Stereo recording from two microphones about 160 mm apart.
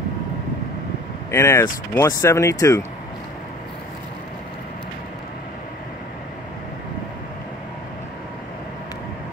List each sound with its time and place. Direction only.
1.3 s speech: 15° left (ahead or behind)